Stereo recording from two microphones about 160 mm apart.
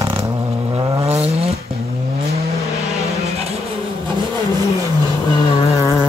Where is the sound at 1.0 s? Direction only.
40° right (ahead or behind).